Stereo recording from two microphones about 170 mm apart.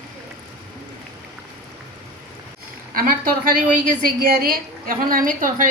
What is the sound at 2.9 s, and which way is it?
A woman's voice, 55° right (ahead or behind).